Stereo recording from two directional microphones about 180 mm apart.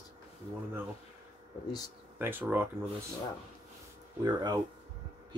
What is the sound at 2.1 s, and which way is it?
Speech, 10° right (ahead or behind).